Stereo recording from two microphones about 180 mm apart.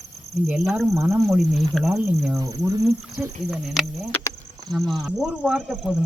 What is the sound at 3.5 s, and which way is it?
Speech, centre (ahead or behind).